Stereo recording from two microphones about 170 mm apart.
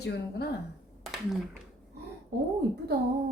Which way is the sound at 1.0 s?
Centre (ahead or behind).